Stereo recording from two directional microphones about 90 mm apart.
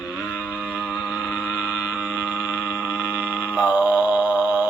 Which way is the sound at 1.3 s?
15° right (ahead or behind).